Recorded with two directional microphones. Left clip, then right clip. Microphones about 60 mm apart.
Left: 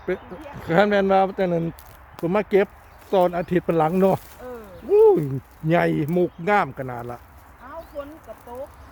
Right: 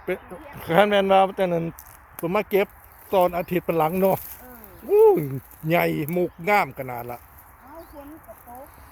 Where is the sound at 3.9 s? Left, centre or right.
Left.